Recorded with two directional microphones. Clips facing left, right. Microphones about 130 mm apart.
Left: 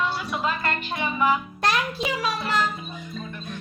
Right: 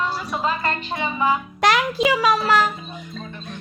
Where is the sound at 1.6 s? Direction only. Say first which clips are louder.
Right 6 dB; 90° right.